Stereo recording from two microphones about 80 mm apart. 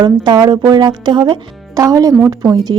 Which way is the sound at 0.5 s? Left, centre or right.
Right.